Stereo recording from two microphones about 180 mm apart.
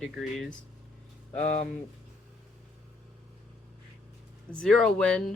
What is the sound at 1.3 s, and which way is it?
Speech, 40° left (ahead or behind).